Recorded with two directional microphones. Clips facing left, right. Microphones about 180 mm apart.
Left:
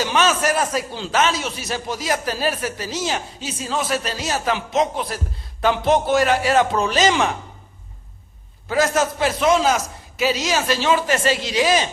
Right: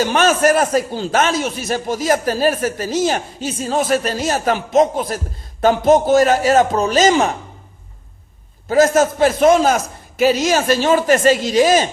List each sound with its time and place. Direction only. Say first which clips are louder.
0.0 s a man's voice: right 5 dB; 50° right (ahead or behind)
8.7 s a man's voice: right 6 dB; 45° right (ahead or behind)